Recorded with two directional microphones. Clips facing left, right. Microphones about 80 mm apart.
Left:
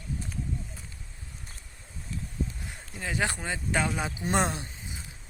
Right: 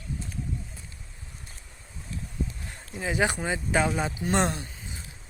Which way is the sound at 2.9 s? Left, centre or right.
Centre.